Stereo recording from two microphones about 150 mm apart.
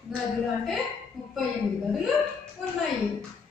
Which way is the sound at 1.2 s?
Centre (ahead or behind).